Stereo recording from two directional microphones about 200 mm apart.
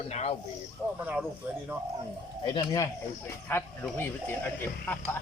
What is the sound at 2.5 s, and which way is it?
Speech, 15° left (ahead or behind).